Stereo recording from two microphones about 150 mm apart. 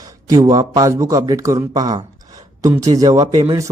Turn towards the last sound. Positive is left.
turn(degrees=-25)  # may be behind; listen again after turning